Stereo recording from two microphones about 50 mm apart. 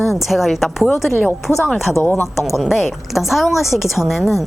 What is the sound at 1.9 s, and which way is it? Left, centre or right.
Speech, left.